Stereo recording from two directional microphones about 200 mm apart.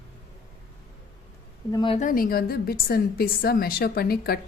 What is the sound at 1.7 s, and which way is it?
Speech, 25° left (ahead or behind).